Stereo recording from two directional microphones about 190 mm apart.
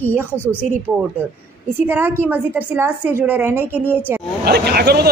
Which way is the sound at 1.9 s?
10° right (ahead or behind).